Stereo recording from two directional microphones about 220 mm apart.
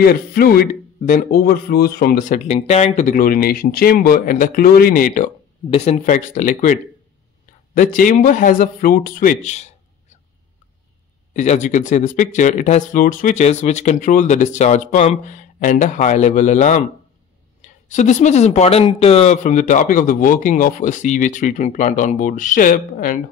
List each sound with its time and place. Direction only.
0.0 s speech: 40° left (ahead or behind)
11.3 s speech: 35° left (ahead or behind)